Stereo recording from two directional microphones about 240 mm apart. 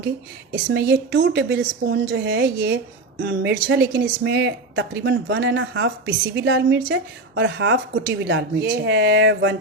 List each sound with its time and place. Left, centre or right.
0.5 s speech: right